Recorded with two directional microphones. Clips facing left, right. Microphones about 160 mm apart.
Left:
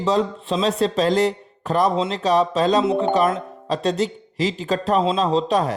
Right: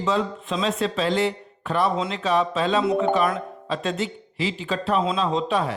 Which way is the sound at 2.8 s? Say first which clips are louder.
Left 2 dB; 25° left (ahead or behind).